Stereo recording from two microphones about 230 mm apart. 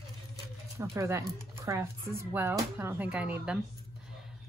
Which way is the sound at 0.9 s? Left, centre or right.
Centre.